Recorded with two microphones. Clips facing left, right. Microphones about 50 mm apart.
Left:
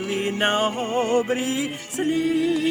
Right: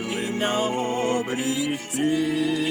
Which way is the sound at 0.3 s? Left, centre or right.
Left.